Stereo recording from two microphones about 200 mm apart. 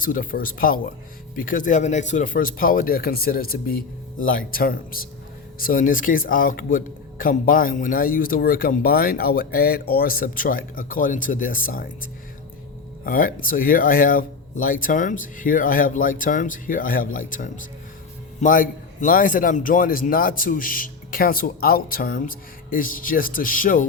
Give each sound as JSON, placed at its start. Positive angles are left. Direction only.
{"t": 0.0, "sound": "speech", "side_deg": 45}
{"t": 13.1, "sound": "speech", "side_deg": 45}